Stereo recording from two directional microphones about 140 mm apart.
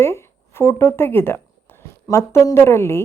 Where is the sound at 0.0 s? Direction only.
20° left (ahead or behind).